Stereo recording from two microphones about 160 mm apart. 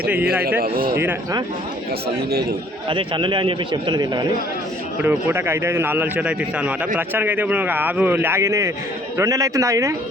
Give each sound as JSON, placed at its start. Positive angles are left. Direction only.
{"t": 0.6, "sound": "a man's voice", "side_deg": -65}
{"t": 2.9, "sound": "a man's voice", "side_deg": -30}
{"t": 5.0, "sound": "a man's voice", "side_deg": -15}